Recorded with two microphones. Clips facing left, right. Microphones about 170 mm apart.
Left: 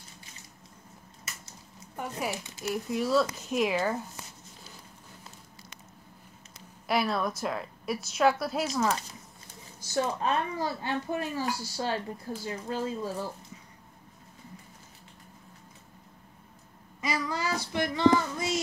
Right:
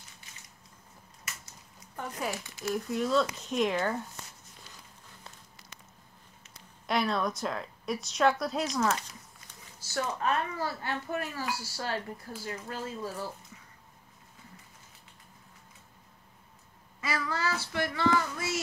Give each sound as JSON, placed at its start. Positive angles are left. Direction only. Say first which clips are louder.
{"t": 2.3, "sound": "speech", "louder": "left 1 dB", "side_deg": 20}
{"t": 2.7, "sound": "a woman's voice", "louder": "left 1 dB", "side_deg": 5}
{"t": 6.9, "sound": "a woman's voice", "louder": "left 1 dB", "side_deg": 5}
{"t": 9.8, "sound": "speech", "louder": "left 4 dB", "side_deg": 20}
{"t": 17.0, "sound": "child singing", "louder": "left 1 dB", "side_deg": 15}